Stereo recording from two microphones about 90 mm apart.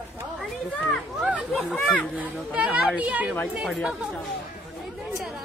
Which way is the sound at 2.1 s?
15° right (ahead or behind).